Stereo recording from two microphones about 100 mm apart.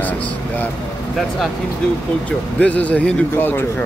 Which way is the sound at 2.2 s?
15° left (ahead or behind).